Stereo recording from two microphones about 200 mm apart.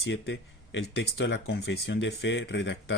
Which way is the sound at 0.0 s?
60° left (ahead or behind).